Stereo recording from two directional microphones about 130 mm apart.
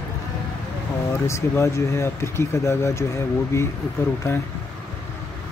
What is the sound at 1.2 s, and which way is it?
Speech, 20° left (ahead or behind).